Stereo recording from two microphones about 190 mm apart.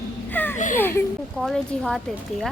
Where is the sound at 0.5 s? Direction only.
40° left (ahead or behind).